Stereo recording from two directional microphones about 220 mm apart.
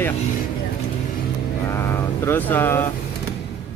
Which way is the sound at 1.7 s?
10° left (ahead or behind).